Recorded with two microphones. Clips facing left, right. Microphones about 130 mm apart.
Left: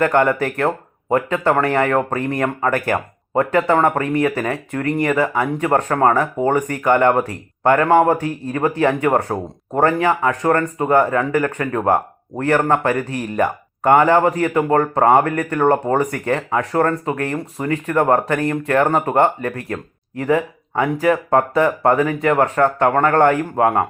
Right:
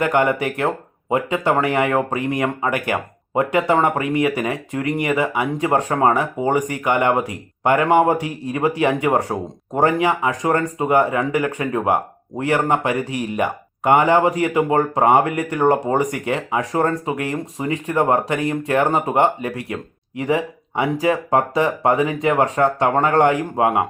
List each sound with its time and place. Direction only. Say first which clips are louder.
0.0 s speech: left 2 dB; 10° right (ahead or behind)